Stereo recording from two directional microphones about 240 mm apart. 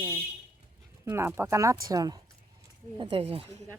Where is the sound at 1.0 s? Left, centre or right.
Centre.